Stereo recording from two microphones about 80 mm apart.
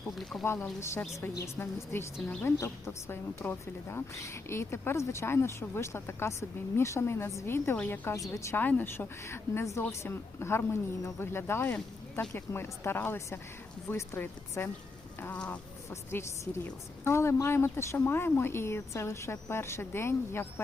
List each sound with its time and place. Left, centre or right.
0.2 s speech: centre
0.4 s a woman's voice: left
15.3 s speech: centre
15.9 s a woman's voice: left